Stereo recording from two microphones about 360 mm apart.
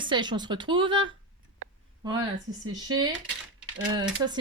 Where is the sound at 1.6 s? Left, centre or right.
Right.